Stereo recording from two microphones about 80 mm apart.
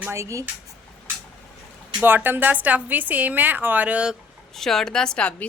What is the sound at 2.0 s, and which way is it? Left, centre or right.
A woman's voice, right.